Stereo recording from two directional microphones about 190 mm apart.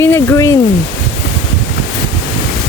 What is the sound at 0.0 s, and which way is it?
Speech, 10° left (ahead or behind).